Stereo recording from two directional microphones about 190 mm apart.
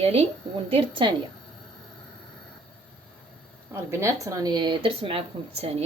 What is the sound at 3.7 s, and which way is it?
Speech, 15° right (ahead or behind).